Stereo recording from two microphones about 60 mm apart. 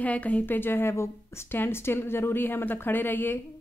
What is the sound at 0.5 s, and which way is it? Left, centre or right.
A woman's voice, left.